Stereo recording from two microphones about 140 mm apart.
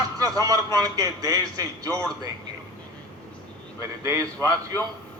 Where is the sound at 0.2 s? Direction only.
25° right (ahead or behind).